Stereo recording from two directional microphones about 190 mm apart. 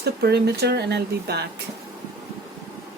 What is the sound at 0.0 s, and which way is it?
A woman's voice, 60° right (ahead or behind).